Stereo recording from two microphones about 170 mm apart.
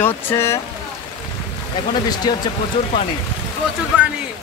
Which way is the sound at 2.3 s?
25° left (ahead or behind).